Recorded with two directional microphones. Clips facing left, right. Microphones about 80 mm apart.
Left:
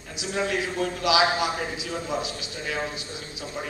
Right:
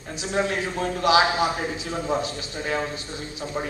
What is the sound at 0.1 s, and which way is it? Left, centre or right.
A man's voice, right.